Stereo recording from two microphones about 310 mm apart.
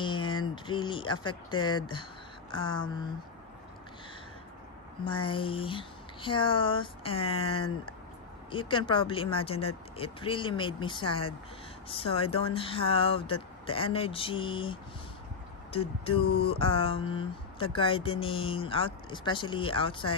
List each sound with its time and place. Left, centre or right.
0.0 s a sound: centre
0.7 s speech: centre
5.0 s speech: centre